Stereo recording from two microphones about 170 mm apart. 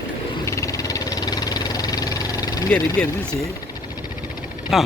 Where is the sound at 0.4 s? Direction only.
20° left (ahead or behind).